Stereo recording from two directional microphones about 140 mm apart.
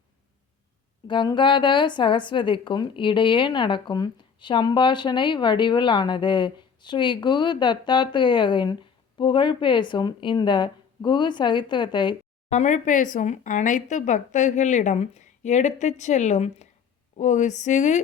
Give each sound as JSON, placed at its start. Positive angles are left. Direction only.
{"t": 1.0, "sound": "a woman's voice", "side_deg": 35}
{"t": 12.5, "sound": "speech", "side_deg": 60}